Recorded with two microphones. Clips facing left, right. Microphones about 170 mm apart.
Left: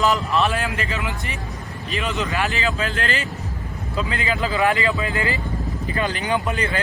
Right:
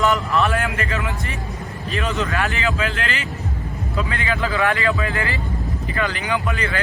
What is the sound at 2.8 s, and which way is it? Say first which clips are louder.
Speech: even; 40° left (ahead or behind).